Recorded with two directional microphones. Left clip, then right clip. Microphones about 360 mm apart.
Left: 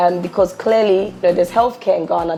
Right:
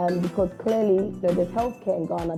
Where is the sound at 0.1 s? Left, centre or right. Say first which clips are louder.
Left 6 dB; centre.